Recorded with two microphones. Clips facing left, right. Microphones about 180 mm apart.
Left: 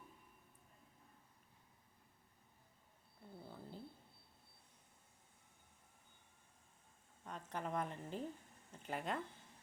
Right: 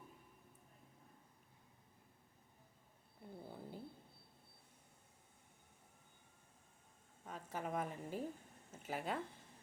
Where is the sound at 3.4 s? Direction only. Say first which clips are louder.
Right 2 dB; 15° right (ahead or behind).